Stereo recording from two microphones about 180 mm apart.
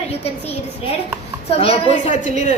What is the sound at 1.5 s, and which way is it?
A woman's voice, 35° left (ahead or behind).